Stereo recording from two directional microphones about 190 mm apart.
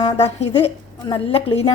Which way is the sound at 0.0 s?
35° left (ahead or behind).